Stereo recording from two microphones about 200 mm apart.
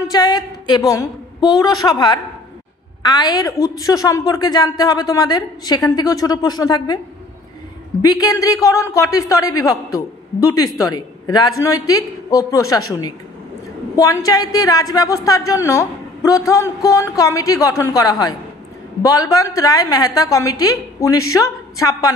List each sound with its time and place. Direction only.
0.1 s a woman's voice: 20° left (ahead or behind)
8.0 s a woman's voice: 20° left (ahead or behind)